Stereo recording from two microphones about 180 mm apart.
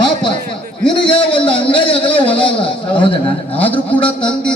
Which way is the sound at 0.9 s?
25° left (ahead or behind).